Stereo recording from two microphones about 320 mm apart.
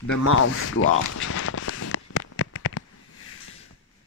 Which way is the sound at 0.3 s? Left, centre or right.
Left.